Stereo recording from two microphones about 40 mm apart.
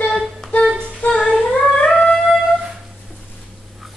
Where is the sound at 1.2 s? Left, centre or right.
Centre.